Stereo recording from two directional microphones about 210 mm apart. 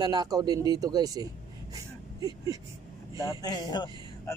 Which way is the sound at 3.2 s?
20° left (ahead or behind).